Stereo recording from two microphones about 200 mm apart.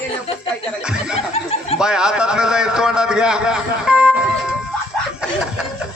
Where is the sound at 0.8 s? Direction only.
5° right (ahead or behind).